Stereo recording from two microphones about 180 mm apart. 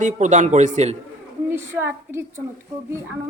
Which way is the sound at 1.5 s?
15° right (ahead or behind).